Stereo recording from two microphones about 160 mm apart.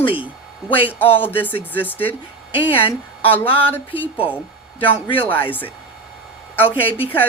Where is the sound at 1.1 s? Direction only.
10° left (ahead or behind).